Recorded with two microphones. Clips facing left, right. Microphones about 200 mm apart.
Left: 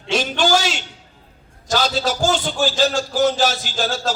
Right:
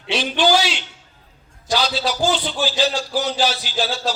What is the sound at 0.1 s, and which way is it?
A man's voice, 45° left (ahead or behind).